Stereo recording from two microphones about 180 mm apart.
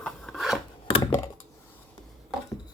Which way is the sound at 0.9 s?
30° left (ahead or behind).